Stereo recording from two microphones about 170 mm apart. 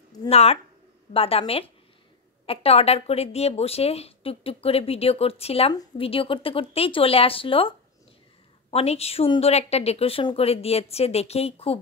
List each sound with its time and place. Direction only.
0.3 s speech: 35° left (ahead or behind)